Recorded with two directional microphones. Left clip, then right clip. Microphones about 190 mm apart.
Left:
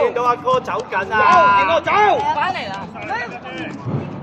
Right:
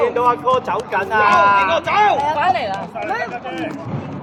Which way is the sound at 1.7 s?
40° left (ahead or behind).